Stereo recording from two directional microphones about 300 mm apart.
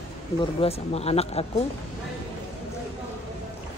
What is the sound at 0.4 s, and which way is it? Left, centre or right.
Speech, centre.